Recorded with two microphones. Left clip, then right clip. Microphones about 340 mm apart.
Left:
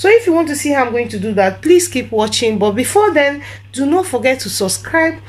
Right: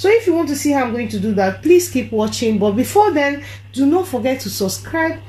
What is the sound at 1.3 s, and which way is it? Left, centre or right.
Speech, left.